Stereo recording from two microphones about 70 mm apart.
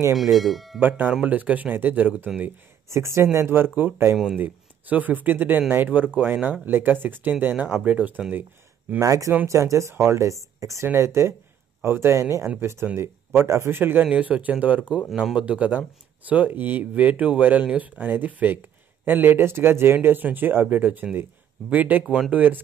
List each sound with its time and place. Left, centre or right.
0.1 s speech: centre
0.7 s speech: right
2.9 s a man's voice: right
9.0 s speech: right
11.8 s a man's voice: right
14.0 s speech: centre